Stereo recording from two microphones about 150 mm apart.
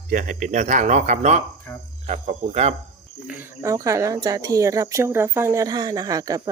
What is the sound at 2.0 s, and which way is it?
Cricket, 45° right (ahead or behind).